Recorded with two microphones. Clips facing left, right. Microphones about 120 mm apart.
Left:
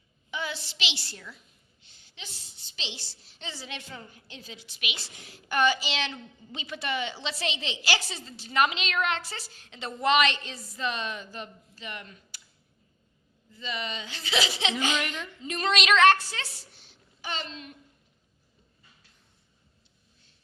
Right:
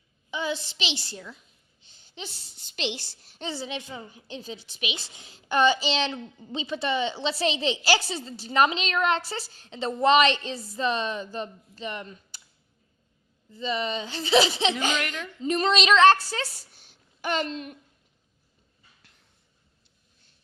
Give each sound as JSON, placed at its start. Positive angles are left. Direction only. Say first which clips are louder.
{"t": 0.3, "sound": "a woman's voice", "louder": "right 5 dB", "side_deg": -20}
{"t": 2.0, "sound": "a sound", "louder": "right 7 dB", "side_deg": -30}
{"t": 2.6, "sound": "a woman's voice", "louder": "right 10 dB", "side_deg": -55}
{"t": 3.5, "sound": "a woman's voice", "louder": "right 7 dB", "side_deg": -20}
{"t": 13.5, "sound": "speech", "louder": "right 7 dB", "side_deg": -30}
{"t": 14.9, "sound": "a woman's voice", "louder": "right 1 dB", "side_deg": 0}
{"t": 15.4, "sound": "speech", "louder": "right 5 dB", "side_deg": -35}